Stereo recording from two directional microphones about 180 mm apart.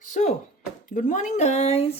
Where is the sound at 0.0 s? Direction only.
45° left (ahead or behind).